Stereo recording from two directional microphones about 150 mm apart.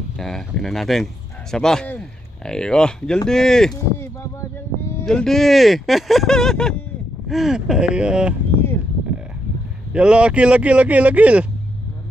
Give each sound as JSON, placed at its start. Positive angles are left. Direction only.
{"t": 0.2, "sound": "speech", "side_deg": 0}
{"t": 3.7, "sound": "a sound", "side_deg": 20}
{"t": 5.0, "sound": "speech", "side_deg": 5}
{"t": 9.9, "sound": "a man's voice", "side_deg": -5}